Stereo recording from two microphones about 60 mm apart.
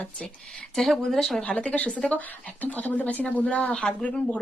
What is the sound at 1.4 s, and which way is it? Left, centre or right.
Speech, centre.